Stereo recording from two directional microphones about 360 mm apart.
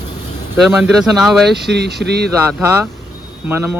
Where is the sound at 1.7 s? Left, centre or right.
Right.